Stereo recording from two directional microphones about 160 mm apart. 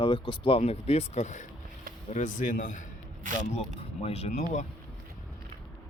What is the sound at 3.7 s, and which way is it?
Speech, 40° left (ahead or behind).